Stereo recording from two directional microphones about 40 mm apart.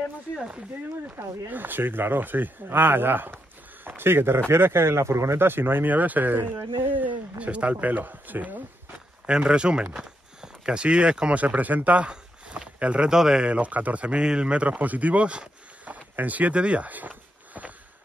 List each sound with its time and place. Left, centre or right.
1.0 s speech: right
4.5 s speech: right
5.4 s speech: right
5.9 s speech: right
7.3 s speech: right
9.2 s speech: right
11.3 s speech: right
12.1 s a sound: right
13.1 s speech: centre
13.5 s speech: right
14.2 s speech: right
14.6 s speech: right